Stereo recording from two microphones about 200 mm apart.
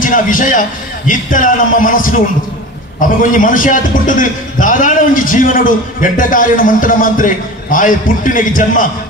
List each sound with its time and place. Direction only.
0.0 s a man's voice: 40° left (ahead or behind)